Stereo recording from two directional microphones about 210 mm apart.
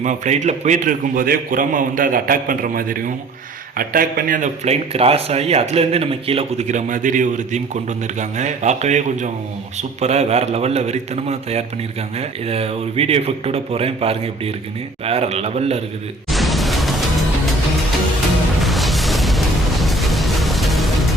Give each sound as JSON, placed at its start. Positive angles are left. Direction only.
{"t": 0.0, "sound": "speech", "side_deg": -35}
{"t": 16.3, "sound": "a sound", "side_deg": 0}
{"t": 18.6, "sound": "music", "side_deg": 0}